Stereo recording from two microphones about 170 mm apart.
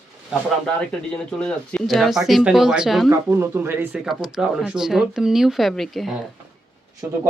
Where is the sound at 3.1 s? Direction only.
15° right (ahead or behind).